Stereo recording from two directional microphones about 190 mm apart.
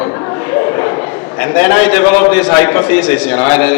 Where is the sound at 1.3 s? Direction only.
10° left (ahead or behind).